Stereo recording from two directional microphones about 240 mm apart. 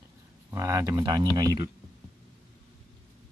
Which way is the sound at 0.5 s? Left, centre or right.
Centre.